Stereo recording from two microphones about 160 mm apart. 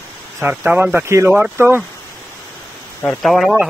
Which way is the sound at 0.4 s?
10° right (ahead or behind).